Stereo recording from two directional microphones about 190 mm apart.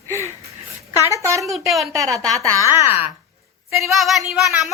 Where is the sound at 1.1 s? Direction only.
15° right (ahead or behind).